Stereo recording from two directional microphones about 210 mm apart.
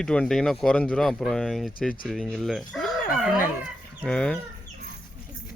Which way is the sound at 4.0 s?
5° left (ahead or behind).